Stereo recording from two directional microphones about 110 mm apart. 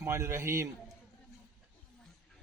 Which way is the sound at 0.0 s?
25° right (ahead or behind).